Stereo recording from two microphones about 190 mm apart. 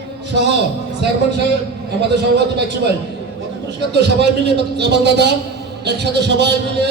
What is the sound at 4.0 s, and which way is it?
A man's voice, 60° right (ahead or behind).